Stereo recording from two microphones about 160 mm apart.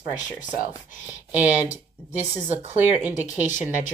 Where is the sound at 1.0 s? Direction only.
10° right (ahead or behind).